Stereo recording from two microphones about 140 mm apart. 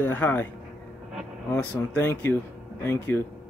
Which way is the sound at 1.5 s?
15° left (ahead or behind).